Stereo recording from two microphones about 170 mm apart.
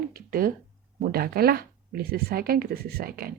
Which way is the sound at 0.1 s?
60° right (ahead or behind).